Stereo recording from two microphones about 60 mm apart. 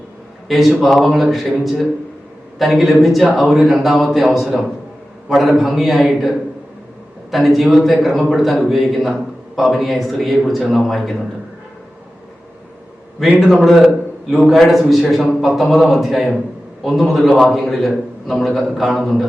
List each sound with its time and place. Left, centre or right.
0.4 s speech: centre
13.4 s a man's voice: centre